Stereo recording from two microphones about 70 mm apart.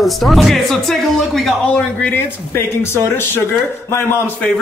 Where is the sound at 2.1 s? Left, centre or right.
Left.